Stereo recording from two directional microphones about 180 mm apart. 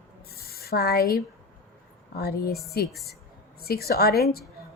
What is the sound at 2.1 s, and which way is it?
A woman's voice, 60° left (ahead or behind).